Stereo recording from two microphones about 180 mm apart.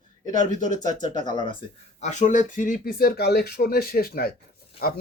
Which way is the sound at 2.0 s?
40° left (ahead or behind).